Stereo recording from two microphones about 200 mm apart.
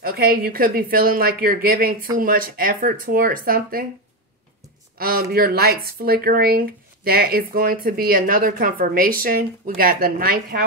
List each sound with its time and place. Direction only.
0.0 s speech: 50° right (ahead or behind)
4.9 s speech: 50° right (ahead or behind)